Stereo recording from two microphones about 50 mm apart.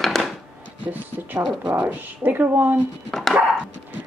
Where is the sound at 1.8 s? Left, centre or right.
Right.